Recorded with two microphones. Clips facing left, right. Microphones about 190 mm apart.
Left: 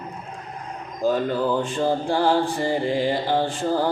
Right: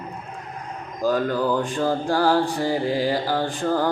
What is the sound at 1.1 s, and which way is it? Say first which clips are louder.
Mantra: right 2 dB; 5° left (ahead or behind).